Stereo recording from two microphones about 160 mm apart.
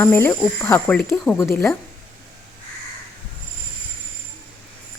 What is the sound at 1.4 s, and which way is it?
Speech, 15° left (ahead or behind).